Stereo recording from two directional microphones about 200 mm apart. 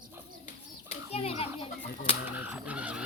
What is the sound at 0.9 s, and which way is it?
Children playing, 30° left (ahead or behind).